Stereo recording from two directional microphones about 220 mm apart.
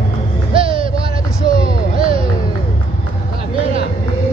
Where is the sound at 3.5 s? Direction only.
25° right (ahead or behind).